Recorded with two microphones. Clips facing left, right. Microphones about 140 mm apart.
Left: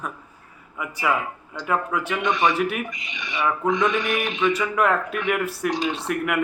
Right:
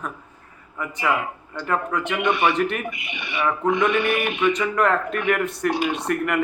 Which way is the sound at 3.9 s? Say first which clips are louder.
Right 3 dB; 60° right (ahead or behind).